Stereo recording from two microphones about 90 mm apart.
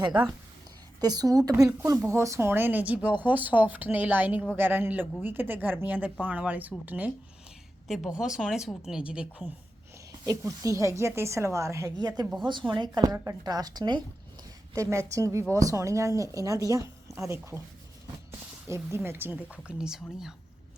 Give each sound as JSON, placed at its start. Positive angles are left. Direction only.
{"t": 0.0, "sound": "speech", "side_deg": -55}
{"t": 1.0, "sound": "speech", "side_deg": -45}
{"t": 7.9, "sound": "a woman's voice", "side_deg": -5}
{"t": 10.1, "sound": "speech", "side_deg": -40}
{"t": 11.9, "sound": "speech", "side_deg": -50}
{"t": 14.8, "sound": "speech", "side_deg": -35}